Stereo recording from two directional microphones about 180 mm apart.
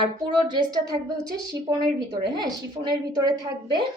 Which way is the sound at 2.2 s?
25° right (ahead or behind).